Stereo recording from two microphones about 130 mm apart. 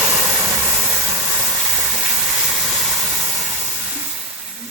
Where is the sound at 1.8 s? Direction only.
5° right (ahead or behind).